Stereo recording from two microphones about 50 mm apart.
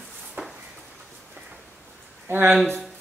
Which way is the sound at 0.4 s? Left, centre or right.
Right.